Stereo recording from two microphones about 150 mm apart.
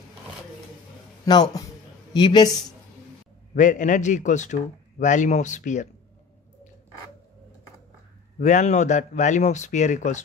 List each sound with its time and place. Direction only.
1.3 s a man's voice: 20° left (ahead or behind)
3.5 s a man's voice: 55° left (ahead or behind)
8.4 s speech: 50° left (ahead or behind)